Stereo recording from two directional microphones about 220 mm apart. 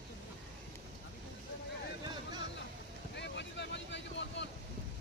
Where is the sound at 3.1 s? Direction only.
50° left (ahead or behind).